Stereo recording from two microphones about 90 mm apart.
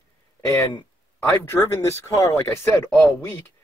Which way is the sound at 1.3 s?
30° left (ahead or behind).